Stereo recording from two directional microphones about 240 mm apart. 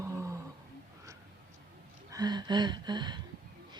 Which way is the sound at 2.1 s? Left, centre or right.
Centre.